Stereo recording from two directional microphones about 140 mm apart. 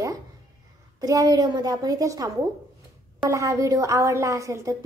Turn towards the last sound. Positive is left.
turn(degrees=-20)  # may be behind; listen again after turning